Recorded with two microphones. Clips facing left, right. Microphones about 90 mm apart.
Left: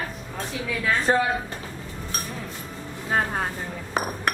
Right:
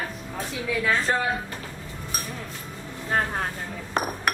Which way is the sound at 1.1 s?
25° left (ahead or behind).